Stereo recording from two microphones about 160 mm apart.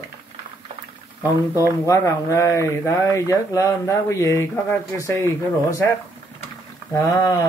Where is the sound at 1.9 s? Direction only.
20° left (ahead or behind).